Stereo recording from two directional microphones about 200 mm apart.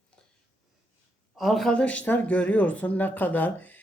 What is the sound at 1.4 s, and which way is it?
Speech, centre (ahead or behind).